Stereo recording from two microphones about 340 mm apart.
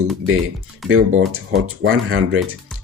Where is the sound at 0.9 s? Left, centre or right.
Right.